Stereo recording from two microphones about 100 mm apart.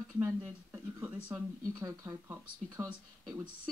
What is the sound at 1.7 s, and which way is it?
Speech, 35° right (ahead or behind).